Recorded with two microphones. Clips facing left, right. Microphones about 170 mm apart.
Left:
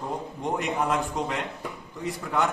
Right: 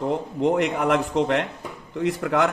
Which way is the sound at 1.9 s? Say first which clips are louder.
Right 6 dB; 85° right.